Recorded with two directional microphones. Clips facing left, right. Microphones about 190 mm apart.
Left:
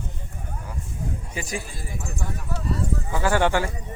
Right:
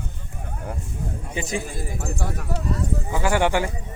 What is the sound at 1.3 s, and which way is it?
Speech, 25° right (ahead or behind).